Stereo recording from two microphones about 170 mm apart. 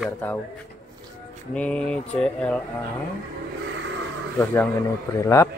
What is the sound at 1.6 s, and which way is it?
Speech, 5° left (ahead or behind).